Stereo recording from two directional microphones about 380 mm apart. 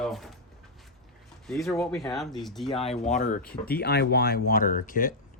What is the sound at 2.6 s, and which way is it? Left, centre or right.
Speech, centre.